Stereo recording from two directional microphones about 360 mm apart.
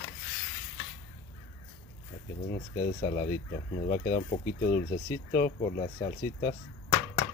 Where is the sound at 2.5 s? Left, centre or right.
Centre.